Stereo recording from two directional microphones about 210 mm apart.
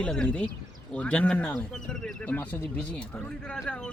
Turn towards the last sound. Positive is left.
turn(degrees=5)  # may be behind; listen again after turning